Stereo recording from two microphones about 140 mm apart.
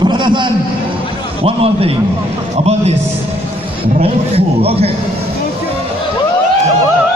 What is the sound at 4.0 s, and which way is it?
Speech, 45° right (ahead or behind).